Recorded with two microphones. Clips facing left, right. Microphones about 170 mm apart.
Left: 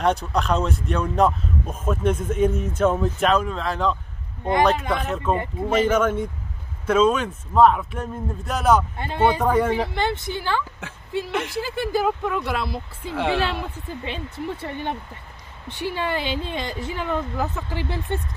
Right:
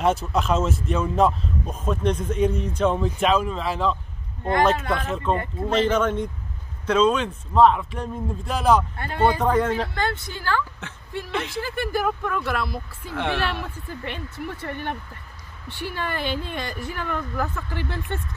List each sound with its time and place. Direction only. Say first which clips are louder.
0.0 s a man's voice: even; 5° right (ahead or behind)
4.9 s a man's voice: left 1 dB; centre (ahead or behind)
8.9 s speech: left 1 dB; 15° left (ahead or behind)